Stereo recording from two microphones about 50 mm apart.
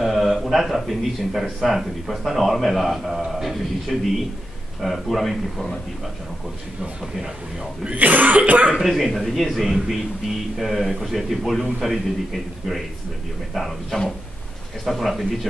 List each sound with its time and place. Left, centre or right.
0.0 s a man's voice: centre
7.8 s cough: right
8.7 s a man's voice: centre